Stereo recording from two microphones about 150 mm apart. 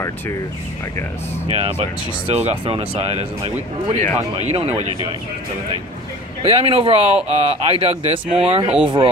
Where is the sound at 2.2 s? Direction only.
40° right (ahead or behind).